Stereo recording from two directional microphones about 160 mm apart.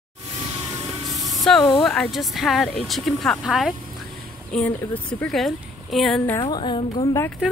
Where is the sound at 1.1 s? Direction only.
20° right (ahead or behind).